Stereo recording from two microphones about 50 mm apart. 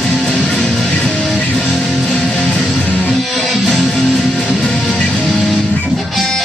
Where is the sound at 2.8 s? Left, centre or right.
Left.